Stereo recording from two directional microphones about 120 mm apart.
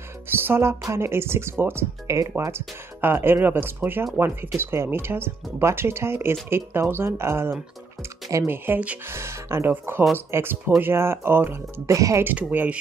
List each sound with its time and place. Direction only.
0.5 s speech: 20° right (ahead or behind)
12.3 s speech: 15° right (ahead or behind)